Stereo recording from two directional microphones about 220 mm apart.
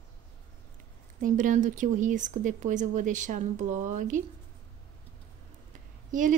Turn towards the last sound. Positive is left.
turn(degrees=-35)  # may be behind; listen again after turning